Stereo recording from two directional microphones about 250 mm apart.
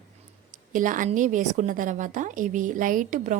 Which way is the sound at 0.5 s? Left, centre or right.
Right.